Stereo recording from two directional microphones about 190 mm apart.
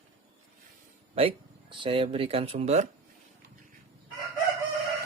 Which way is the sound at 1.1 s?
30° right (ahead or behind).